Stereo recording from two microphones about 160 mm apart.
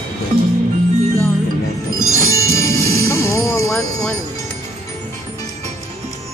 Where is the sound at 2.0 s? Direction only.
20° left (ahead or behind).